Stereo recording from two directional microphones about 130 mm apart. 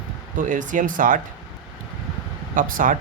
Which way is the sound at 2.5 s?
90° right.